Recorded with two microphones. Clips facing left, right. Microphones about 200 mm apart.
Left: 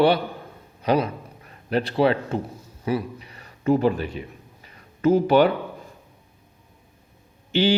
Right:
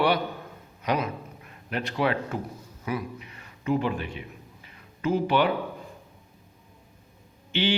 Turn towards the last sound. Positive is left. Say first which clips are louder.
# left 6 dB
turn(degrees=40)  # may be behind; listen again after turning